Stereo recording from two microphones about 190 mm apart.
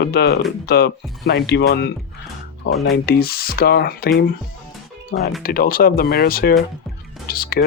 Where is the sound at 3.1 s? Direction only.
55° left (ahead or behind).